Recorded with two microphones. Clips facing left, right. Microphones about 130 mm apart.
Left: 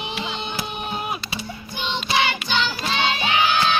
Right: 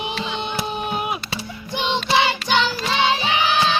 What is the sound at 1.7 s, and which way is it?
Music, 85° right.